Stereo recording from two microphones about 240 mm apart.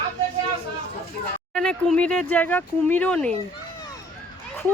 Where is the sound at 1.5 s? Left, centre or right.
Centre.